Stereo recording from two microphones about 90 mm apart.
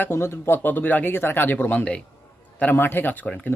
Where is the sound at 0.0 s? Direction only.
30° left (ahead or behind).